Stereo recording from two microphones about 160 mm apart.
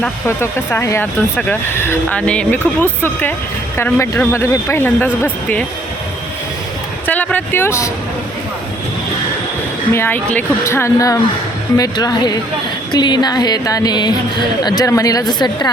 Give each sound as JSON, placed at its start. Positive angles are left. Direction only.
{"t": 0.0, "sound": "speech", "side_deg": 15}
{"t": 7.1, "sound": "speech", "side_deg": 10}
{"t": 9.9, "sound": "a woman's voice", "side_deg": 15}